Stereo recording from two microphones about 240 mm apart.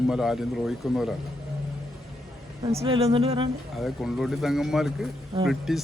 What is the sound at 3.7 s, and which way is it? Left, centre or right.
Speech, centre.